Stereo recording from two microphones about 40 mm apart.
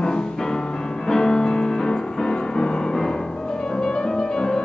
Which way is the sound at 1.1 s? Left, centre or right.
Centre.